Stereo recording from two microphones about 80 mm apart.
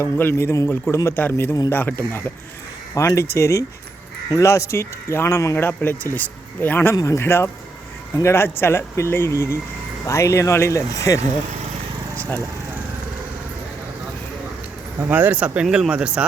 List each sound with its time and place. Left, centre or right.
0.0 s speech: left
1.1 s speech: left
2.9 s speech: left
5.5 s speech: left
6.9 s speech: left
12.1 s vehicle: centre
15.0 s speech: right
15.6 s speech: centre
15.9 s speech: centre